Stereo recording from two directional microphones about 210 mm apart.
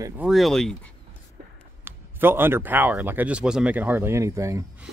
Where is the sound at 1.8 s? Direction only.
10° right (ahead or behind).